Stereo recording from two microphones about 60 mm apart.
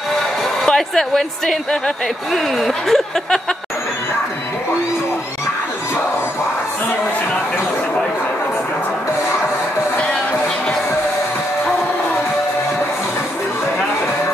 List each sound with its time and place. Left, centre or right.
0.7 s a woman's voice: centre